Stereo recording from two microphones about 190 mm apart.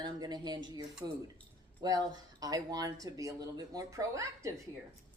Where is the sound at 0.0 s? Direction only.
20° right (ahead or behind).